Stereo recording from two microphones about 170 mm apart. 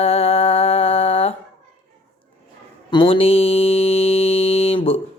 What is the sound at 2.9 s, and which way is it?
Music, 30° left (ahead or behind).